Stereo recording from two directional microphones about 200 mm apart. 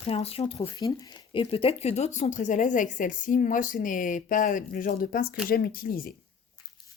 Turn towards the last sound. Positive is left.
turn(degrees=45)  # may be behind; listen again after turning